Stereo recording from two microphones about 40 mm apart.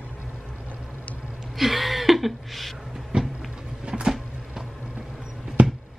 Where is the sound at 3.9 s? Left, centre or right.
Right.